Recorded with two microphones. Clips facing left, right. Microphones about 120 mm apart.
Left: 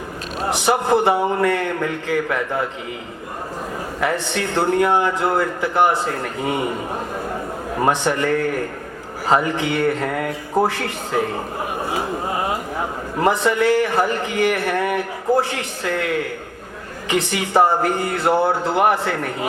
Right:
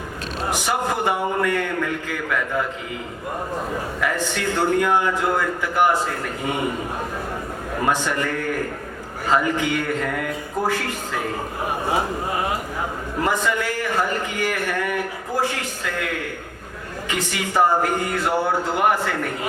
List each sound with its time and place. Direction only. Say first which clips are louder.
0.5 s a man's voice: left 7 dB; 30° left (ahead or behind)
4.0 s a man's voice: left 3 dB; 30° left (ahead or behind)
7.9 s a man's voice: left 4 dB; 30° left (ahead or behind)
13.2 s a man's voice: left 6 dB; 30° left (ahead or behind)